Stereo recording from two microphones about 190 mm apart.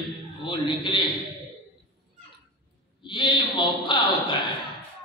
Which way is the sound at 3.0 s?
25° left (ahead or behind).